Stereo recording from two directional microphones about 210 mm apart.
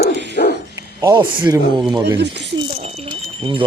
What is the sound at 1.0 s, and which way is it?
Speech, 20° right (ahead or behind).